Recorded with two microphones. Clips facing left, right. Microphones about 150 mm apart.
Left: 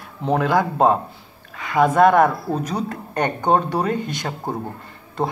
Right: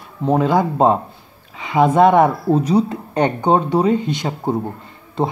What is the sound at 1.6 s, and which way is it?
Speech, 25° right (ahead or behind).